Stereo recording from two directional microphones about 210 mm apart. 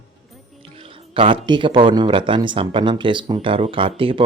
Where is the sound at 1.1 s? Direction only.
25° right (ahead or behind).